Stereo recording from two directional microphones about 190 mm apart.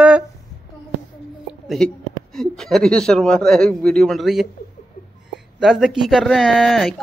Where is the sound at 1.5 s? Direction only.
Centre (ahead or behind).